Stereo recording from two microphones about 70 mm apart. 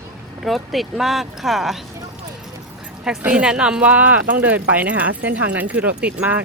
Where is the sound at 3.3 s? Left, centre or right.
Centre.